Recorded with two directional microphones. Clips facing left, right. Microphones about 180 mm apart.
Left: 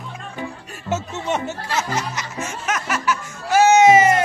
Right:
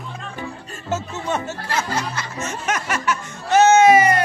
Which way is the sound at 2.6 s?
Centre (ahead or behind).